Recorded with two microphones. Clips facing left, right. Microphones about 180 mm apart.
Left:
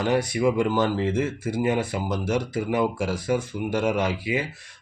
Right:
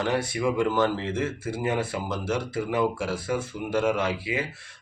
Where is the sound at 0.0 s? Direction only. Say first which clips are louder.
Left 4 dB; 15° left (ahead or behind).